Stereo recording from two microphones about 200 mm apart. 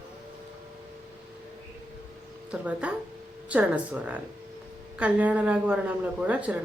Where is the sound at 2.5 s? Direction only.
5° right (ahead or behind).